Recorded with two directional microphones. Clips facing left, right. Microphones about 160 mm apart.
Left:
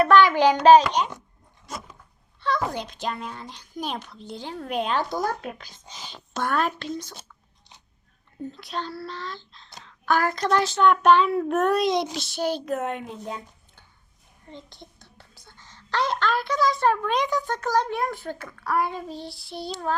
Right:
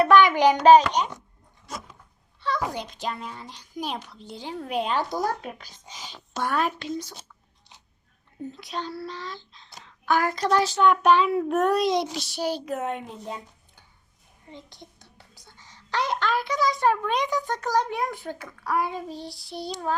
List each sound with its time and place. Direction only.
0.0 s a child's voice: 15° right (ahead or behind)
2.4 s a child's voice: 10° right (ahead or behind)
8.5 s a child's voice: 15° right (ahead or behind)
14.5 s a child's voice: 15° right (ahead or behind)
19.1 s child singing: 40° right (ahead or behind)
19.7 s a child's voice: 10° right (ahead or behind)